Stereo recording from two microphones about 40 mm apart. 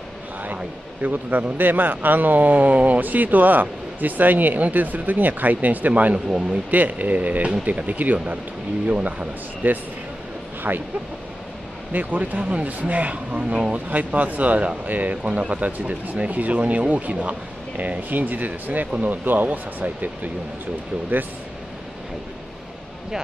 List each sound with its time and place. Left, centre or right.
1.0 s speech: right
6.1 s speech: right
6.7 s speech: right
10.7 s speech: right
11.9 s speech: right
12.4 s speech: right
13.8 s speech: right